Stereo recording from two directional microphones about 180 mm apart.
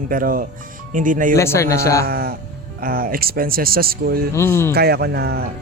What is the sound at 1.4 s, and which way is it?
Speech, 15° left (ahead or behind).